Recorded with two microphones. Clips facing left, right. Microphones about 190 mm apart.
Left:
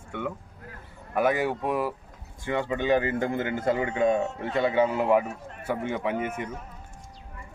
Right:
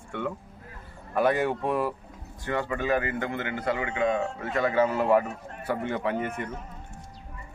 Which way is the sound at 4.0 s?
35° left (ahead or behind).